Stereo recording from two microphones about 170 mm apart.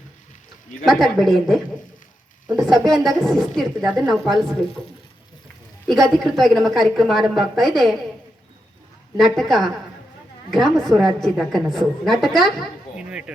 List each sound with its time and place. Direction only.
0.9 s a woman's voice: centre (ahead or behind)
5.9 s a woman's voice: centre (ahead or behind)
9.1 s a woman's voice: centre (ahead or behind)